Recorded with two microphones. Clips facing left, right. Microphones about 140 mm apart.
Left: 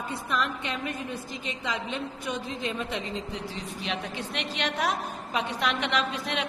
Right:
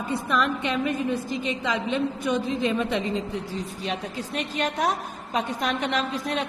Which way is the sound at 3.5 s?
35° right (ahead or behind).